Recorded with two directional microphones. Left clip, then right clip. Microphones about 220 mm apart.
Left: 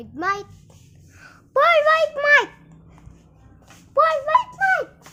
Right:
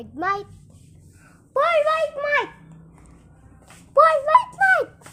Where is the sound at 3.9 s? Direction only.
10° right (ahead or behind).